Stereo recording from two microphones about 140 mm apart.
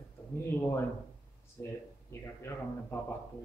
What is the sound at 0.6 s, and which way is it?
Speech, 15° left (ahead or behind).